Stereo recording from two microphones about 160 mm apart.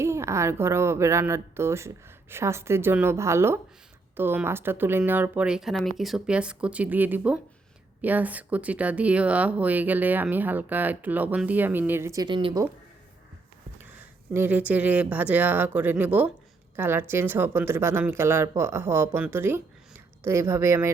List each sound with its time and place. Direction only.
0.0 s speech: 15° right (ahead or behind)
14.3 s speech: 10° right (ahead or behind)